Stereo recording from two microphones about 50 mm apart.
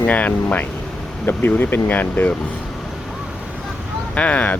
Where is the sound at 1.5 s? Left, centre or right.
Left.